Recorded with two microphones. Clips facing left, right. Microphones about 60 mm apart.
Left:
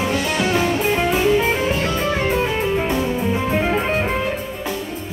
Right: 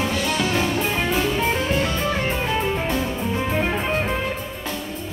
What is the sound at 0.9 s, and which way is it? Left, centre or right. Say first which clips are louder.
Music: left 5 dB; centre.